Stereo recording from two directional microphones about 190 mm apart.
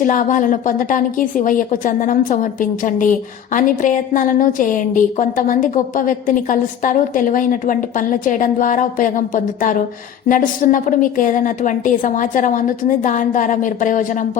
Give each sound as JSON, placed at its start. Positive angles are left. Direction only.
{"t": 0.0, "sound": "a woman's voice", "side_deg": 45}